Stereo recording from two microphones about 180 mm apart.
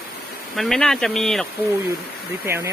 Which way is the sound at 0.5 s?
Centre (ahead or behind).